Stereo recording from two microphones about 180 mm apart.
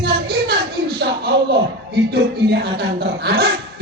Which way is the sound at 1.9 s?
65° right (ahead or behind).